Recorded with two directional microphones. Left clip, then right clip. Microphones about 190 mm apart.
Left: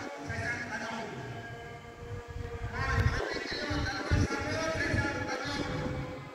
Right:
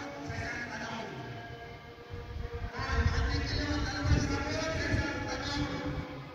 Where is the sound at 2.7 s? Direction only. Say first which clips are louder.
Left 3 dB; 55° right (ahead or behind).